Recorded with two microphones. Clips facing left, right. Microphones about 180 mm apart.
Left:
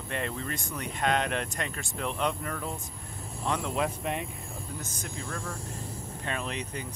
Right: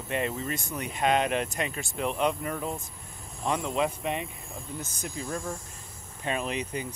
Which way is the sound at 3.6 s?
Centre (ahead or behind).